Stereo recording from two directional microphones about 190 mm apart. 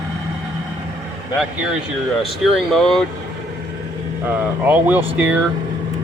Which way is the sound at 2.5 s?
Centre (ahead or behind).